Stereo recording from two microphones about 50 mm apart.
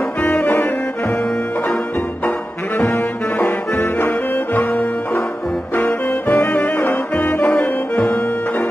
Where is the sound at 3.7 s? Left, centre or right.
Left.